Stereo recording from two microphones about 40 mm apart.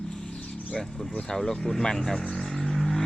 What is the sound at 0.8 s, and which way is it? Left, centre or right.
Vehicle, centre.